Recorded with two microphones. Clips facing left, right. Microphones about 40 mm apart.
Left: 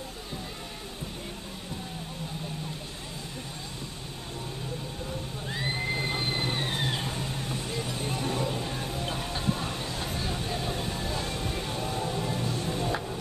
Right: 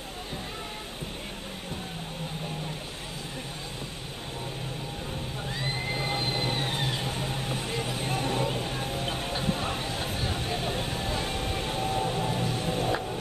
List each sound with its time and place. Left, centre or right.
5.5 s a sound: centre
7.2 s music: right
12.9 s music: centre